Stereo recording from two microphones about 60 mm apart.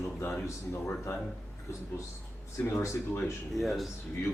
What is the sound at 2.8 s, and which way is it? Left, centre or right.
Speech, left.